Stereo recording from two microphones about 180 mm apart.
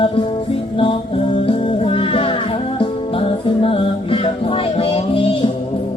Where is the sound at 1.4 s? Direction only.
30° left (ahead or behind).